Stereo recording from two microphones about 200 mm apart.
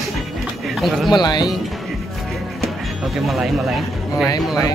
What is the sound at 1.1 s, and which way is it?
Speech, 20° left (ahead or behind).